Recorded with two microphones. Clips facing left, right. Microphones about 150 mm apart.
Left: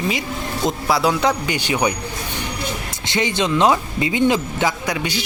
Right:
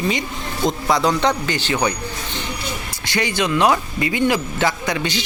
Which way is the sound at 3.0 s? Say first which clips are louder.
Left 1 dB; 25° left (ahead or behind).